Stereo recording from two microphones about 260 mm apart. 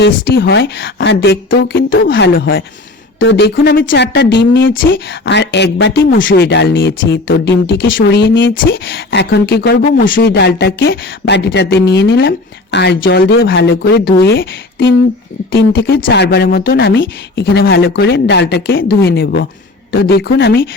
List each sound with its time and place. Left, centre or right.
0.3 s speech: left